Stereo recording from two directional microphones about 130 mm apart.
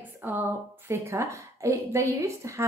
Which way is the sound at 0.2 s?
15° right (ahead or behind).